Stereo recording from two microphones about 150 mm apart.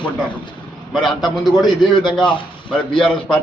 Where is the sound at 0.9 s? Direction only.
Centre (ahead or behind).